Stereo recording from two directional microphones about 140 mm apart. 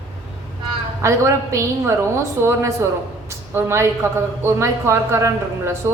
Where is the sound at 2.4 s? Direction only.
20° right (ahead or behind).